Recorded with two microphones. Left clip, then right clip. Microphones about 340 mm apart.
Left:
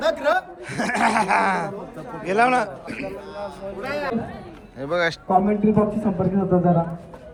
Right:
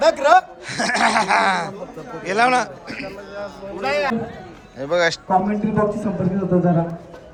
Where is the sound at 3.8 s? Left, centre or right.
Right.